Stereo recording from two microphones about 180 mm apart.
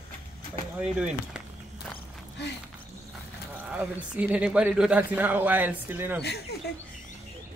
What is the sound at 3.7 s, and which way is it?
A man's voice, 5° right (ahead or behind).